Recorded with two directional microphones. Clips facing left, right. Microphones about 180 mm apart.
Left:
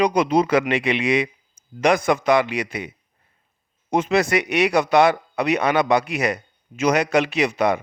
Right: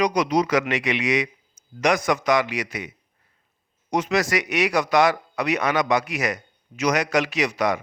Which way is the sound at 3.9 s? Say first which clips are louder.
Left 3 dB; 25° left (ahead or behind).